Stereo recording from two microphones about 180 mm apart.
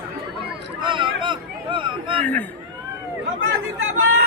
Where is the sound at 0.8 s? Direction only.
25° right (ahead or behind).